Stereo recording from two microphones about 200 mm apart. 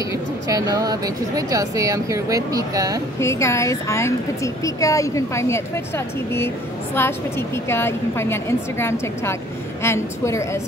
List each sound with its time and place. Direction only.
0.5 s speech: 20° right (ahead or behind)
3.2 s a woman's voice: 15° left (ahead or behind)
7.0 s a woman's voice: 10° left (ahead or behind)